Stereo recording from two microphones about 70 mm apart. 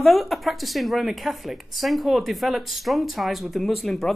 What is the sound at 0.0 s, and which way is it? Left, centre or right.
Speech, centre.